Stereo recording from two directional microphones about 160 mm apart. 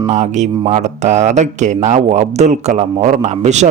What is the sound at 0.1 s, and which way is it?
Speech, 45° right (ahead or behind).